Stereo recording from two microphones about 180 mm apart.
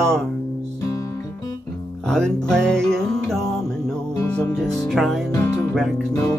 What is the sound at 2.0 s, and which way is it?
Music, 5° left (ahead or behind).